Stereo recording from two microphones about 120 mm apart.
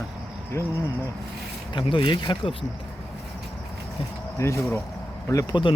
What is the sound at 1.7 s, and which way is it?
Speech, 40° left (ahead or behind).